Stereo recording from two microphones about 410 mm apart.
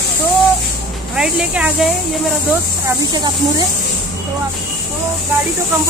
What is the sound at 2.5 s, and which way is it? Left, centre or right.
Speech, centre.